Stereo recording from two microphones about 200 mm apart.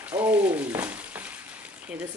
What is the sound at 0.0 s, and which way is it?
Frying, 10° right (ahead or behind).